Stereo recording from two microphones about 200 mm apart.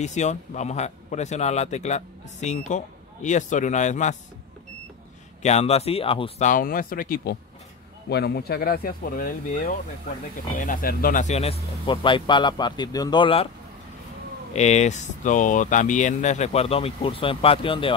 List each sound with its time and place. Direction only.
0.0 s a man's voice: 35° left (ahead or behind)
5.4 s a man's voice: 35° left (ahead or behind)
14.5 s a man's voice: 35° left (ahead or behind)